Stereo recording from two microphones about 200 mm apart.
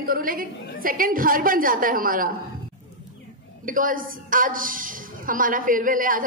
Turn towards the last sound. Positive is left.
turn(degrees=-45)  # may be behind; listen again after turning